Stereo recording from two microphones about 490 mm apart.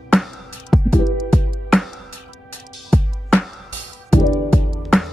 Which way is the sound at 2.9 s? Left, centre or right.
Centre.